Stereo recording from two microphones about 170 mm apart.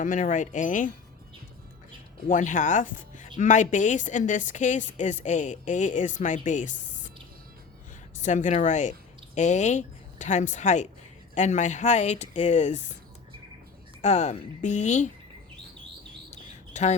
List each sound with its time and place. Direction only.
0.0 s a woman's voice: 50° left (ahead or behind)
2.2 s a woman's voice: 50° left (ahead or behind)
8.2 s a woman's voice: 45° left (ahead or behind)
14.0 s a woman's voice: 40° left (ahead or behind)
16.3 s bird: 40° left (ahead or behind)